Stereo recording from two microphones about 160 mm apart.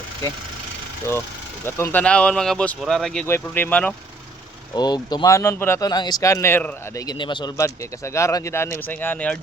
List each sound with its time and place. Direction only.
1.6 s speech: 10° left (ahead or behind)
3.2 s speech: 15° left (ahead or behind)
4.7 s speech: 25° left (ahead or behind)
7.0 s speech: 25° left (ahead or behind); by 9.4 s 10° left (ahead or behind)